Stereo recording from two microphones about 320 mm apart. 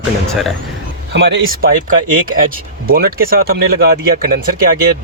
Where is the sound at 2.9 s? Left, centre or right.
Right.